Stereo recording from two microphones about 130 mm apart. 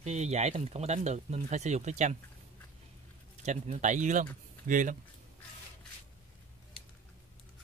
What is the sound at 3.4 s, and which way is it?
Speech, 65° right (ahead or behind).